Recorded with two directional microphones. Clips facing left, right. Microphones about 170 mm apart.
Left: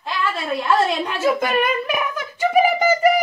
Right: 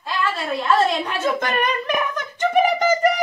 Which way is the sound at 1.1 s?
5° left (ahead or behind).